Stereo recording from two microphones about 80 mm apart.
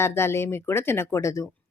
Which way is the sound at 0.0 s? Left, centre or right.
Left.